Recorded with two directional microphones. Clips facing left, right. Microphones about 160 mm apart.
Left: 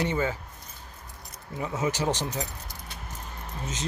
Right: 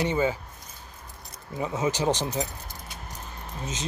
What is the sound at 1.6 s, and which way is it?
Speech, 20° right (ahead or behind).